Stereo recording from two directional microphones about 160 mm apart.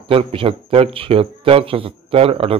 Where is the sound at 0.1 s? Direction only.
35° right (ahead or behind).